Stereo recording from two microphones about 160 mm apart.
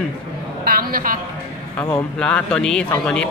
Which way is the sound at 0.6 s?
65° right (ahead or behind).